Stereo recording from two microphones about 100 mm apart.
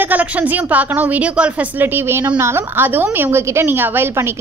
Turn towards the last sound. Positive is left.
turn(degrees=-25)  # may be behind; listen again after turning